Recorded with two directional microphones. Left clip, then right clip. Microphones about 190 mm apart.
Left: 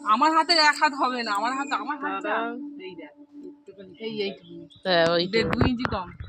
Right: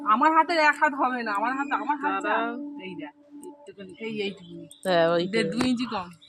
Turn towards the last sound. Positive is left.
turn(degrees=-25)  # may be behind; listen again after turning